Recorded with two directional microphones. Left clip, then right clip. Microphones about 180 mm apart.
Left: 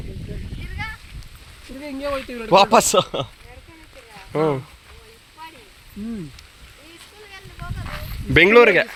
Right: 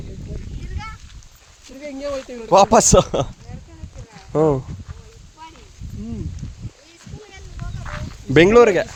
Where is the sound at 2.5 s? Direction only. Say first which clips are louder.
Right 2 dB; 55° right (ahead or behind).